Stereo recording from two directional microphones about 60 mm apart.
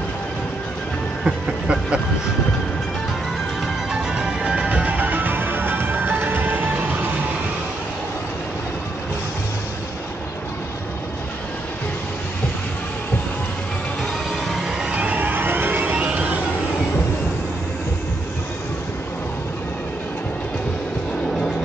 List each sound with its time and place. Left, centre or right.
1.2 s a sound: centre
3.9 s music: centre
4.6 s music: right
14.8 s vehicle: centre
15.2 s vehicle: right
16.0 s music: right